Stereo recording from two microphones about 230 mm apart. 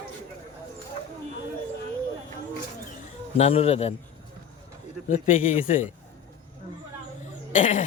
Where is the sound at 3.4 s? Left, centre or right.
Left.